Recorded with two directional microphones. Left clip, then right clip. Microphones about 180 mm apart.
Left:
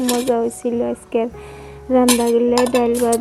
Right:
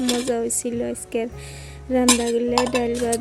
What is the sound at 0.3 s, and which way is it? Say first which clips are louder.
Speech: left 5 dB; 10° right (ahead or behind).